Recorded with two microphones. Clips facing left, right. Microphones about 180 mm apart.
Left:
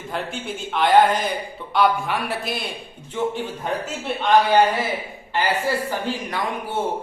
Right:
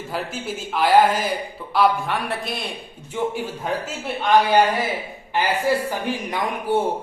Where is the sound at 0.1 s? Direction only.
5° right (ahead or behind).